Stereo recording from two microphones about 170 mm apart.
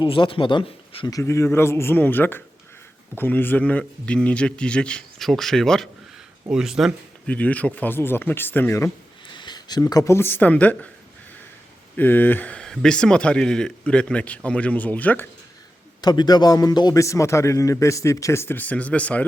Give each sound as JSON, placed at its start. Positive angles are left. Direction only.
{"t": 0.0, "sound": "speech", "side_deg": 30}
{"t": 1.1, "sound": "speech", "side_deg": 15}
{"t": 7.3, "sound": "speech", "side_deg": 10}
{"t": 9.3, "sound": "speech", "side_deg": 25}
{"t": 11.9, "sound": "speech", "side_deg": 10}
{"t": 16.0, "sound": "speech", "side_deg": 25}